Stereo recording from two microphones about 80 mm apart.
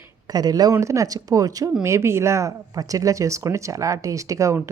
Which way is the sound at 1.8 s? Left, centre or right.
Right.